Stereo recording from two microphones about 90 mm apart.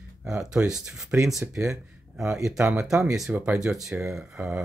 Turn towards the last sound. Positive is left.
turn(degrees=-10)  # may be behind; listen again after turning